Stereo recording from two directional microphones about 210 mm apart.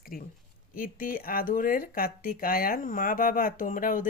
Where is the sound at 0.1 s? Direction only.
40° left (ahead or behind).